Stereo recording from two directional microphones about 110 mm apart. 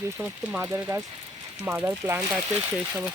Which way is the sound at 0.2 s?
15° right (ahead or behind).